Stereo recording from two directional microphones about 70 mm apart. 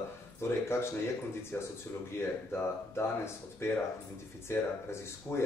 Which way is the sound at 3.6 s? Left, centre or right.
Left.